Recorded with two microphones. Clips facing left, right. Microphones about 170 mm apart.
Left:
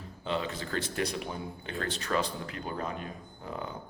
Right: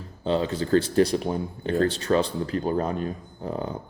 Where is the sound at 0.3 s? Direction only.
30° right (ahead or behind).